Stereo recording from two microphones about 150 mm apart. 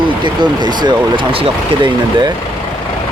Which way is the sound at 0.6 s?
30° right (ahead or behind).